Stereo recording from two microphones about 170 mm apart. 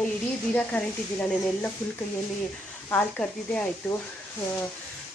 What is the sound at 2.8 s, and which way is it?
Speech, 10° left (ahead or behind).